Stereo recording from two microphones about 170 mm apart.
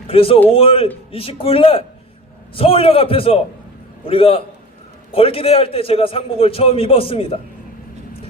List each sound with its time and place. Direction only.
0.1 s a man's voice: 35° left (ahead or behind)